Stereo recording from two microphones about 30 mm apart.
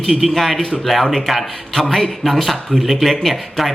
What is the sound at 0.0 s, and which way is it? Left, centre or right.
Speech, centre.